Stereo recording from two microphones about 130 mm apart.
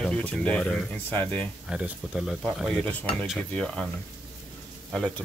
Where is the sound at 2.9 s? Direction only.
10° left (ahead or behind).